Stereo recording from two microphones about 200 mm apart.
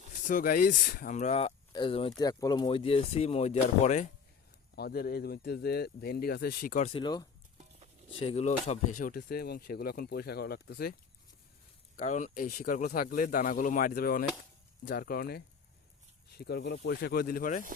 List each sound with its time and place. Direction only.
0.3 s speech: 45° left (ahead or behind)
4.7 s speech: 50° left (ahead or behind)
6.9 s speech: 20° left (ahead or behind)
9.0 s speech: 45° left (ahead or behind)
11.9 s speech: 40° left (ahead or behind)